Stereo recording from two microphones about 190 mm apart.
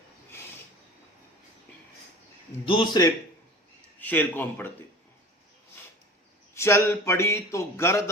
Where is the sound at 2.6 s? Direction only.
25° left (ahead or behind).